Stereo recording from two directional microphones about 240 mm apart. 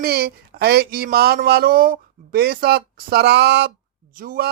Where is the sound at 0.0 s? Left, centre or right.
Right.